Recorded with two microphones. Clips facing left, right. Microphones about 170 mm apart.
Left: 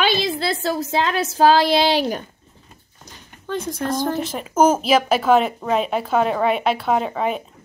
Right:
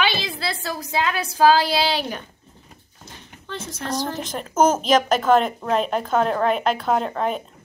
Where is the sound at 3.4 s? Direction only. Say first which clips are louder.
Left 7 dB; 50° left (ahead or behind).